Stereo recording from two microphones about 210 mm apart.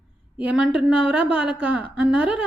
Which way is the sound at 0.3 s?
5° right (ahead or behind).